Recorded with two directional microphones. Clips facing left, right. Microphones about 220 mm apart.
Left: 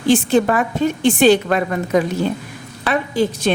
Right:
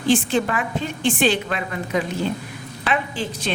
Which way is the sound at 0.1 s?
40° left (ahead or behind).